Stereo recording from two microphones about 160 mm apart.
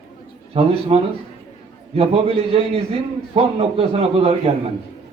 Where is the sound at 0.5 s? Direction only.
35° right (ahead or behind).